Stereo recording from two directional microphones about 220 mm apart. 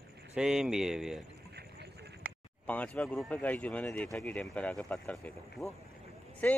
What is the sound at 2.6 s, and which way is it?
Speech, 5° left (ahead or behind).